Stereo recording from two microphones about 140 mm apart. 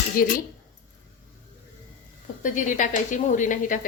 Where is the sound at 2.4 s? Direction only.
70° left (ahead or behind).